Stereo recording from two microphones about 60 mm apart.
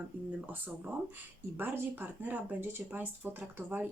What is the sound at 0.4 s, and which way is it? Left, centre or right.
Speech, right.